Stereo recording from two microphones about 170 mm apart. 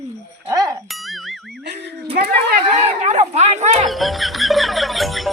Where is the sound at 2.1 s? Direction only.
70° right (ahead or behind).